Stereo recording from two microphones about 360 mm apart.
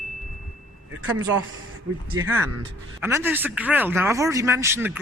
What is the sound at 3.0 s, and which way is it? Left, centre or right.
Speech, centre.